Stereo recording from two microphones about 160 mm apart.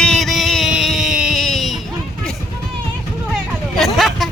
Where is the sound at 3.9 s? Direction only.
Centre (ahead or behind).